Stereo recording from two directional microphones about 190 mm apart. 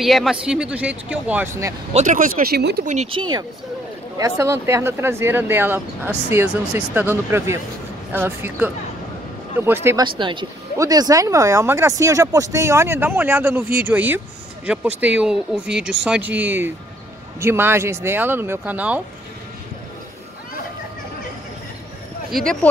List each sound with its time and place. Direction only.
0.0 s speech: centre (ahead or behind)
2.0 s speech: 40° right (ahead or behind)
2.9 s speech: 30° right (ahead or behind); by 10.0 s 10° right (ahead or behind)
10.0 s speech: 25° right (ahead or behind); by 19.0 s 10° right (ahead or behind)
22.3 s speech: 5° left (ahead or behind)